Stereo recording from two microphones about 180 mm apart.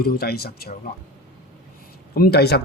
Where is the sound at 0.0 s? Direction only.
55° left (ahead or behind).